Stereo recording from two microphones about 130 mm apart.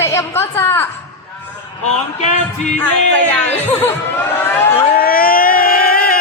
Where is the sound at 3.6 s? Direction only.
15° left (ahead or behind).